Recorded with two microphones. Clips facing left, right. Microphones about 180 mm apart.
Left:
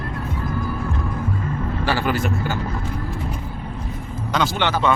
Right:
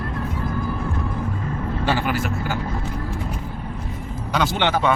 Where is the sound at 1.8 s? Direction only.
20° right (ahead or behind).